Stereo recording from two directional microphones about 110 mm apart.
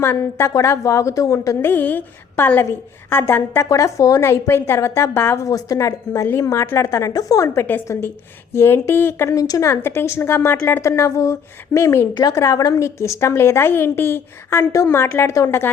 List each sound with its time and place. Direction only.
0.0 s a woman's voice: 20° left (ahead or behind)
1.7 s a woman's voice: 15° left (ahead or behind)